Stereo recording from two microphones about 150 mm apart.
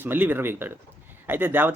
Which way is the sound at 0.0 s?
15° right (ahead or behind).